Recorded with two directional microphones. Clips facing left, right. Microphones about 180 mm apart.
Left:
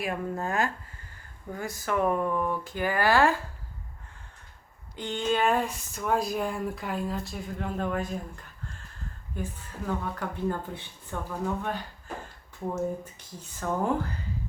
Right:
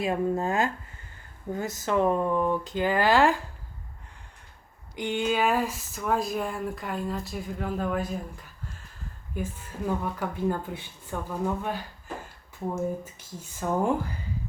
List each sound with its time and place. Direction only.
0.0 s speech: 25° right (ahead or behind)
4.9 s speech: 10° right (ahead or behind)
9.3 s speech: 10° right (ahead or behind)